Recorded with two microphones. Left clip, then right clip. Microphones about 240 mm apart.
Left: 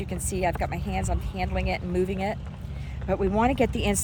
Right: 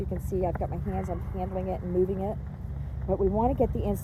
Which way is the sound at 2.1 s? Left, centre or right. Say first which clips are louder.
Left 3 dB; left.